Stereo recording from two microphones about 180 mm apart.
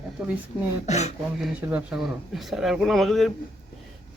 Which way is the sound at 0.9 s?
40° left (ahead or behind).